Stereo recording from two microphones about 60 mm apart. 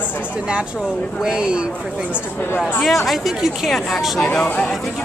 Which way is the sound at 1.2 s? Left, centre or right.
Centre.